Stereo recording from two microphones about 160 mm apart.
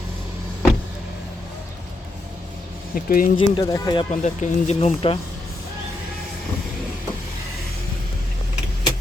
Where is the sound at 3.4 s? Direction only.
25° left (ahead or behind).